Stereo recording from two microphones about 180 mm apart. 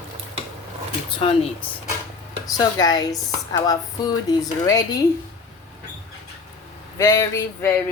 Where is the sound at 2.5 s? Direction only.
20° left (ahead or behind).